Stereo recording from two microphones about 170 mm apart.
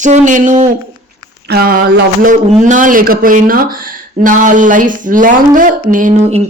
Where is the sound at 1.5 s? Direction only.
60° right (ahead or behind).